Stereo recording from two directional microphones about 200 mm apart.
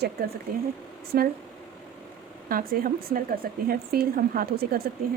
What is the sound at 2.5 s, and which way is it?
Speech, 45° right (ahead or behind).